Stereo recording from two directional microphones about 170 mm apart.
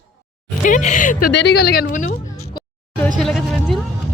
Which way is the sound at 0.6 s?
45° left (ahead or behind).